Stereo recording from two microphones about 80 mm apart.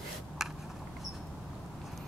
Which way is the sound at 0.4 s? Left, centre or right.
Centre.